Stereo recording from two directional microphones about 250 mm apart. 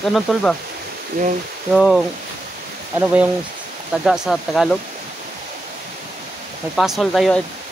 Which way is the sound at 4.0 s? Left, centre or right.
Centre.